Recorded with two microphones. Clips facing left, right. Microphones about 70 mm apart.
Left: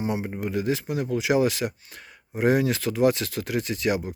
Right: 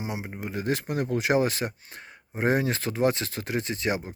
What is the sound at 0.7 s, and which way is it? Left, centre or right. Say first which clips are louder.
Speech: right 3 dB; right.